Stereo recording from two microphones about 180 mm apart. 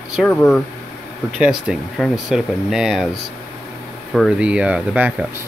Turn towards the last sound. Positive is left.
turn(degrees=-5)  # may be behind; listen again after turning